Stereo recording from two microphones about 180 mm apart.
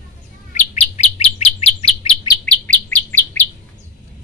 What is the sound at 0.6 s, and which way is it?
Bird, 40° left (ahead or behind).